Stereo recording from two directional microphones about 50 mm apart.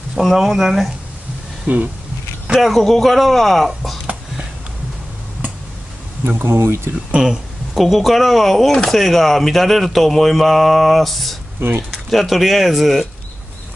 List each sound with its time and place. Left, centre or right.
0.2 s speech: centre
1.7 s speech: right
2.6 s speech: centre
6.2 s speech: right
7.2 s speech: centre